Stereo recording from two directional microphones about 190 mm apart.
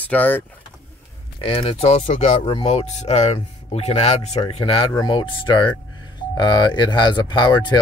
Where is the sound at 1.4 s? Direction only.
30° left (ahead or behind).